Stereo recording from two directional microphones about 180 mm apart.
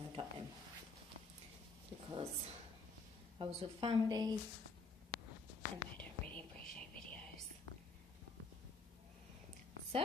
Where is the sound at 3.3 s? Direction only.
30° right (ahead or behind).